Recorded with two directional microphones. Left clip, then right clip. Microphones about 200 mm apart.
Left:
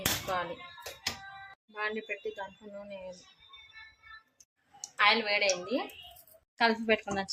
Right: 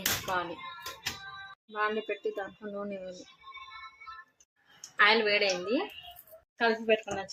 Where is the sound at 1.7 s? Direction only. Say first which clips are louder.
Right 4 dB; 5° right (ahead or behind).